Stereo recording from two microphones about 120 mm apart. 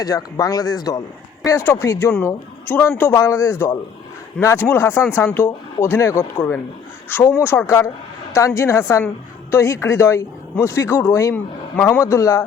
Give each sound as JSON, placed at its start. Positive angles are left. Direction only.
{"t": 0.0, "sound": "speech", "side_deg": 30}